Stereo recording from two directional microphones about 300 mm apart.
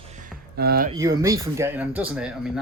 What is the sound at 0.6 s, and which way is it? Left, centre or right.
Speech, right.